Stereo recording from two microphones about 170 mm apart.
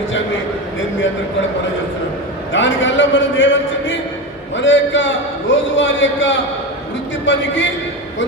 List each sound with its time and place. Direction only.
2.5 s a man's voice: 90° left